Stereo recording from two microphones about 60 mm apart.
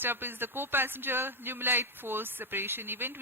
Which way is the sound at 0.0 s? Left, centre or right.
Right.